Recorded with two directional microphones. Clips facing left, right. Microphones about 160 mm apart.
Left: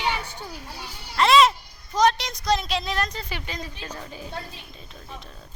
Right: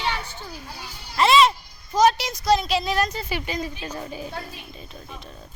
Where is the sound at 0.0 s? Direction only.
15° left (ahead or behind).